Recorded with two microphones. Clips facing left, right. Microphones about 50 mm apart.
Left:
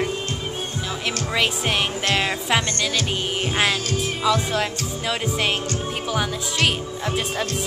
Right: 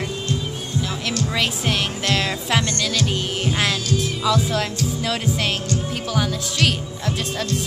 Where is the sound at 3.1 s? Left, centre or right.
Centre.